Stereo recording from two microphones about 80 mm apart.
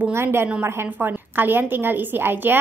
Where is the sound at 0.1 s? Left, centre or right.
Right.